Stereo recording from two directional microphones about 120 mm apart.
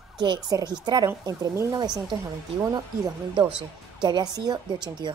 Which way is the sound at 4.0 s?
35° right (ahead or behind).